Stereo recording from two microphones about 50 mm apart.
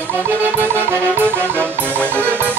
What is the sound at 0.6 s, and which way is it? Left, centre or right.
Music, right.